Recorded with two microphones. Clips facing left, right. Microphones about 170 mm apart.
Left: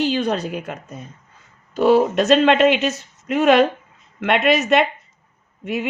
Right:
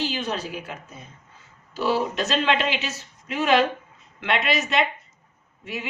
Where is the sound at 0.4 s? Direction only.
60° left (ahead or behind).